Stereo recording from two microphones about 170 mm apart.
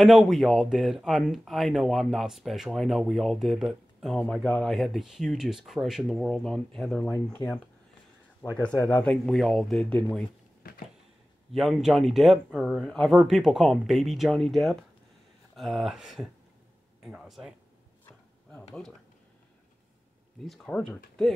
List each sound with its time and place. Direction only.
0.0 s speech: centre (ahead or behind)
10.6 s a sound: 60° left (ahead or behind)
11.5 s speech: centre (ahead or behind)
20.4 s speech: centre (ahead or behind)